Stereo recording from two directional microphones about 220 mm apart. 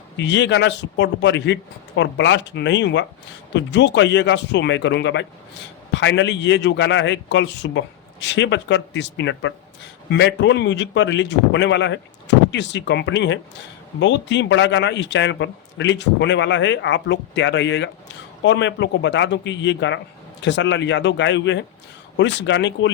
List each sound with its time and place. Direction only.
0.2 s a man's voice: 55° left (ahead or behind)